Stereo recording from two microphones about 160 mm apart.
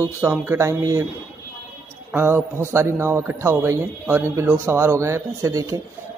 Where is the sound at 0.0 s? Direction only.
15° right (ahead or behind).